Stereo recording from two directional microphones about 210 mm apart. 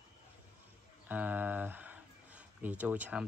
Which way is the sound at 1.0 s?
10° right (ahead or behind).